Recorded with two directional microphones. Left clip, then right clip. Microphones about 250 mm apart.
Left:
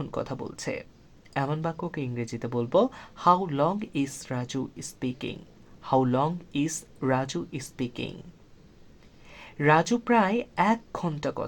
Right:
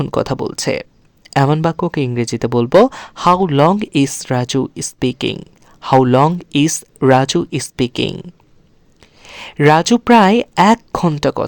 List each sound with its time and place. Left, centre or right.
0.0 s speech: right
9.2 s speech: right